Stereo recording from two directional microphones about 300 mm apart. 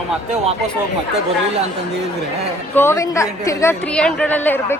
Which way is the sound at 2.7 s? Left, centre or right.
Centre.